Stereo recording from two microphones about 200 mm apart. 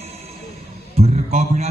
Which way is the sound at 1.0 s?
35° right (ahead or behind).